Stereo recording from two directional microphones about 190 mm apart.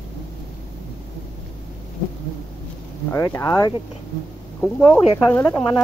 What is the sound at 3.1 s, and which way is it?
Speech, 15° left (ahead or behind).